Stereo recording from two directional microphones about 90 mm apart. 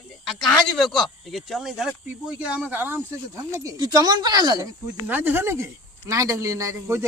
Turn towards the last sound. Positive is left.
turn(degrees=-35)  # may be behind; listen again after turning